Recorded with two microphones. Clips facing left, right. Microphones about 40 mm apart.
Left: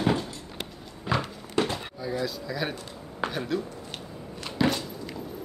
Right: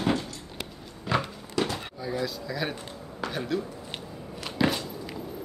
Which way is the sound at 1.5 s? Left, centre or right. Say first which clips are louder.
Left 2 dB; left.